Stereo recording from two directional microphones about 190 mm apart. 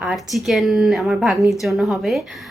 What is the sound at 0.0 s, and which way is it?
A woman's voice, 5° right (ahead or behind).